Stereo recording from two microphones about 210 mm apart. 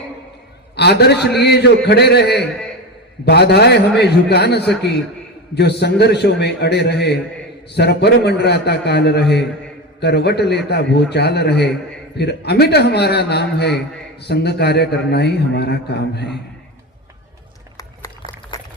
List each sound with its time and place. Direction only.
0.8 s a man's voice: 50° left (ahead or behind)